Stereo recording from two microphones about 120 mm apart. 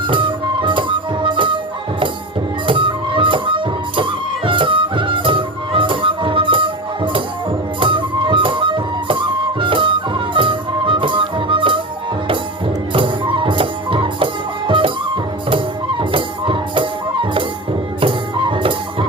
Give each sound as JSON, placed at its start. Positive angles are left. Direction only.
{"t": 0.1, "sound": "music", "side_deg": -45}
{"t": 2.6, "sound": "music", "side_deg": -45}
{"t": 12.9, "sound": "music", "side_deg": -45}